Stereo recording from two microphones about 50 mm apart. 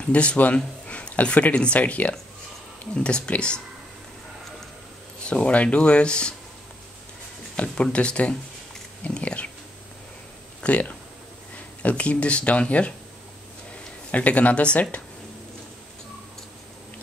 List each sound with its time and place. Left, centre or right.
0.0 s speech: left
5.2 s speech: left
7.5 s speech: left
9.0 s dog: left
10.6 s speech: left
14.1 s speech: left